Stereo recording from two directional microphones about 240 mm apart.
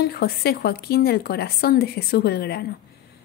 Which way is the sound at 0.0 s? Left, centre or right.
Left.